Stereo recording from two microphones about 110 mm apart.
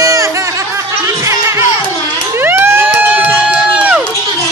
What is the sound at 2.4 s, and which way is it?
Crowd, 20° right (ahead or behind).